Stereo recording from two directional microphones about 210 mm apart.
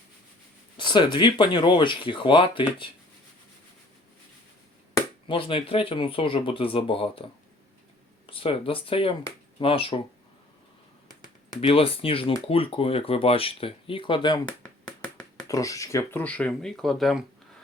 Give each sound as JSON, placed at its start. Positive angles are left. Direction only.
{"t": 0.8, "sound": "speech", "side_deg": 20}
{"t": 5.3, "sound": "speech", "side_deg": 25}
{"t": 8.3, "sound": "speech", "side_deg": 25}
{"t": 11.6, "sound": "speech", "side_deg": 25}